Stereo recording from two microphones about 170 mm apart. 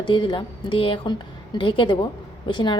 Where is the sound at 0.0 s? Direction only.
30° left (ahead or behind).